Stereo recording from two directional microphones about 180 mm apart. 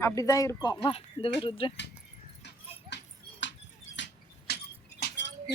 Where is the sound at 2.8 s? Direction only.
85° left.